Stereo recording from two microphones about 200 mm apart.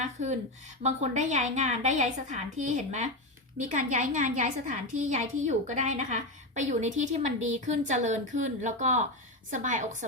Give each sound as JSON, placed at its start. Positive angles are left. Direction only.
{"t": 0.0, "sound": "a woman's voice", "side_deg": -35}